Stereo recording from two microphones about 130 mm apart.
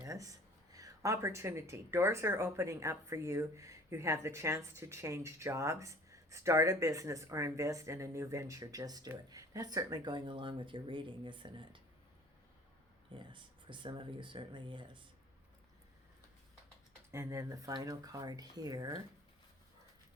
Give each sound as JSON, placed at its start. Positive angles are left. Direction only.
{"t": 0.0, "sound": "speech", "side_deg": -25}
{"t": 13.1, "sound": "speech", "side_deg": -40}
{"t": 17.1, "sound": "speech", "side_deg": -20}